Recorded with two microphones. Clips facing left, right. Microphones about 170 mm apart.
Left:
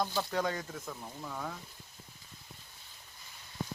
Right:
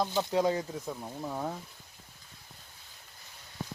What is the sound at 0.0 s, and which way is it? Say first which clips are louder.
Speech: right 5 dB; 20° right (ahead or behind).